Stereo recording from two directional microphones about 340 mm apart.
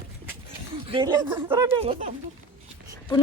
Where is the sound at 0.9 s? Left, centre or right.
Centre.